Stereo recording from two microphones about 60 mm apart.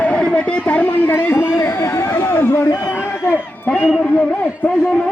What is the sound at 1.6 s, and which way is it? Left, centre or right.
Chatter, left.